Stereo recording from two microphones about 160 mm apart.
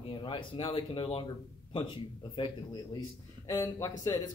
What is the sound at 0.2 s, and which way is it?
A man's voice, 30° left (ahead or behind).